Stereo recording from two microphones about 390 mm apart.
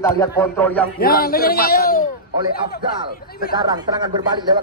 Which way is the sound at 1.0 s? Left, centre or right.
Left.